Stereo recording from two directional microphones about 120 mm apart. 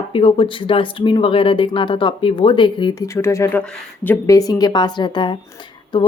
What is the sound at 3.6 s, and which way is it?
Speech, 10° left (ahead or behind).